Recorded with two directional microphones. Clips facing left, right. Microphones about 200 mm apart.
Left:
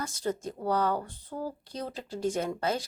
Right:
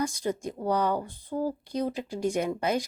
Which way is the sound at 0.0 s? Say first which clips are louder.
Right 3 dB; 15° right (ahead or behind).